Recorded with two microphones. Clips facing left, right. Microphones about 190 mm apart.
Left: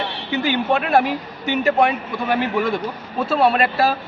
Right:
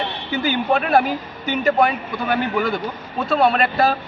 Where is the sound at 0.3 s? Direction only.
Centre (ahead or behind).